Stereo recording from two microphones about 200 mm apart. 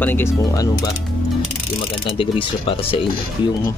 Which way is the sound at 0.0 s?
10° left (ahead or behind).